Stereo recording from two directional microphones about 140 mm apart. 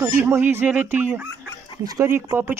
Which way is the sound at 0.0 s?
15° right (ahead or behind).